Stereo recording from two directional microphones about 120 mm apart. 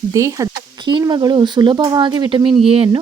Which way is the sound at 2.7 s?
55° right (ahead or behind).